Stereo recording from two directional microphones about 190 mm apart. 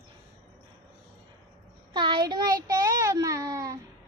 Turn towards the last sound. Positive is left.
turn(degrees=-15)  # may be behind; listen again after turning